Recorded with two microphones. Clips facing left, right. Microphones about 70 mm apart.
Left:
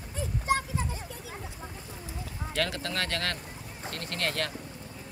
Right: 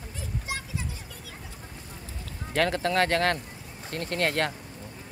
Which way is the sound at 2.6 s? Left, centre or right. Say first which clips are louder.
Right 8 dB; right.